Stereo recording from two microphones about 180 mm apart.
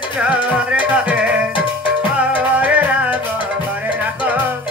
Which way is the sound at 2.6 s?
10° right (ahead or behind).